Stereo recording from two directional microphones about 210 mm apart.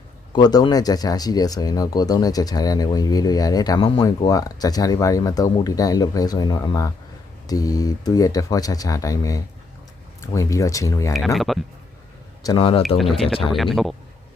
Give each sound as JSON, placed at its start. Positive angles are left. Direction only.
{"t": 0.3, "sound": "speech", "side_deg": 20}
{"t": 11.3, "sound": "speech", "side_deg": 0}
{"t": 12.4, "sound": "speech", "side_deg": 20}
{"t": 13.0, "sound": "speech", "side_deg": 0}